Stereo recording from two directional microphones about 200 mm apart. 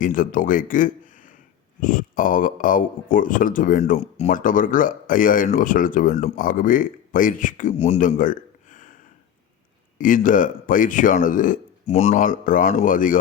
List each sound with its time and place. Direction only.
0.0 s speech: 40° left (ahead or behind)
10.0 s speech: 40° left (ahead or behind)